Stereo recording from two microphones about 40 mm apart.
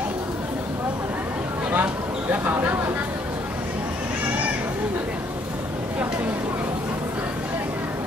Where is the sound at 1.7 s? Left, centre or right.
Right.